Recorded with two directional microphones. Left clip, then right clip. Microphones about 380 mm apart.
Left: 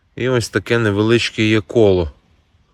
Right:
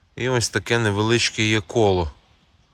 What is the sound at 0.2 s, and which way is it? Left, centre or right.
Speech, centre.